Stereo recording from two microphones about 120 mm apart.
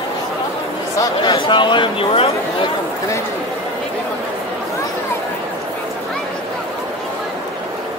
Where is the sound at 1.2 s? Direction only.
45° left (ahead or behind).